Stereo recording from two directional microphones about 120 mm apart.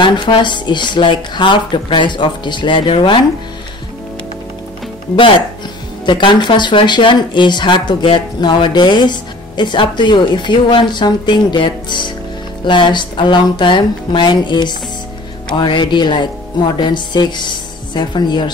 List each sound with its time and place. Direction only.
0.0 s speech: 40° left (ahead or behind)
6.0 s speech: 40° left (ahead or behind)